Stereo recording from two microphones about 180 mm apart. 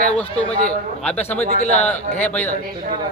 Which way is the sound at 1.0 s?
10° left (ahead or behind).